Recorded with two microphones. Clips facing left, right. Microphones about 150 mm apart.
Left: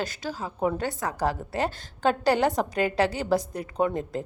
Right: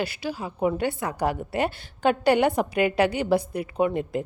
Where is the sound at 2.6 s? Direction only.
15° right (ahead or behind).